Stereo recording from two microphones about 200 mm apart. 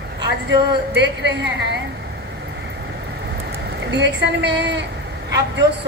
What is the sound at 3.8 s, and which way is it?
A woman's voice, 60° right (ahead or behind).